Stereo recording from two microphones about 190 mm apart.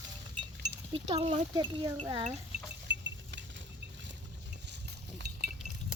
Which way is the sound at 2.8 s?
70° right (ahead or behind).